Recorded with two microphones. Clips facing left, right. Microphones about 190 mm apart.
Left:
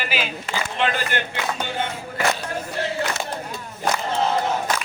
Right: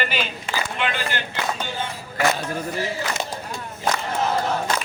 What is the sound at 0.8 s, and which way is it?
Speech, 40° left (ahead or behind).